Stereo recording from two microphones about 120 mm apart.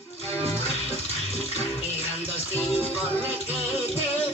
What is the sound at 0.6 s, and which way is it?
Music, 60° left (ahead or behind).